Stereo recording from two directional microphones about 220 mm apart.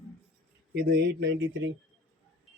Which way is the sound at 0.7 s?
50° right (ahead or behind).